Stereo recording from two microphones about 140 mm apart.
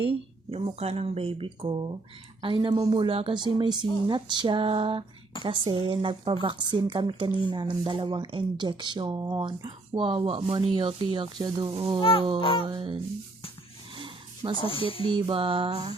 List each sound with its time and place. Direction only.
0.0 s speech: 40° right (ahead or behind)
12.4 s speech: 40° left (ahead or behind)
12.6 s speech: 35° right (ahead or behind)
13.9 s a sound: 35° right (ahead or behind)
14.5 s speech: 40° left (ahead or behind)
15.1 s speech: 40° right (ahead or behind)